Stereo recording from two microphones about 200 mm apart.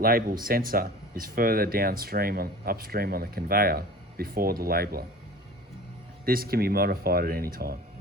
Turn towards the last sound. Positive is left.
turn(degrees=-50)  # may be behind; listen again after turning